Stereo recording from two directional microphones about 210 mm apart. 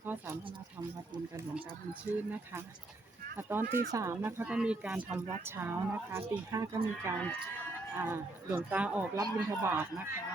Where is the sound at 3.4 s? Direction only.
10° right (ahead or behind).